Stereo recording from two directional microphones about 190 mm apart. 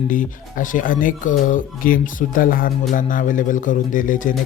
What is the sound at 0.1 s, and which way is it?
Speech, 45° left (ahead or behind).